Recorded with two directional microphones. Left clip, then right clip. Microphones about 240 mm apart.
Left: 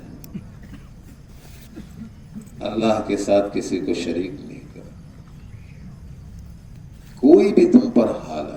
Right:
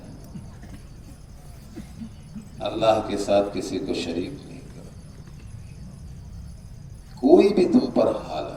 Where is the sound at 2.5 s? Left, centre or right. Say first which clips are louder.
Even; left.